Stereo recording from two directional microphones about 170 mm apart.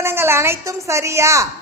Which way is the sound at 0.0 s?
15° right (ahead or behind).